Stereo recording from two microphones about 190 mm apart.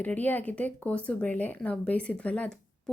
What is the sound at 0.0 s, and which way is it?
A woman's voice, 10° left (ahead or behind).